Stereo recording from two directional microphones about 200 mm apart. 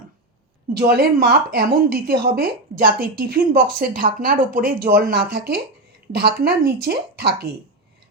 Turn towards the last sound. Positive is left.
turn(degrees=-50)  # may be behind; listen again after turning